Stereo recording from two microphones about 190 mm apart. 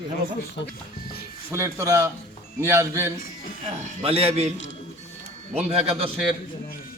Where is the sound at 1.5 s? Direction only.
15° right (ahead or behind).